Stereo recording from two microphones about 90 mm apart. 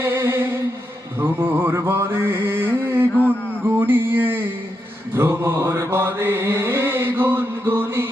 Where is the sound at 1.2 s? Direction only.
25° right (ahead or behind).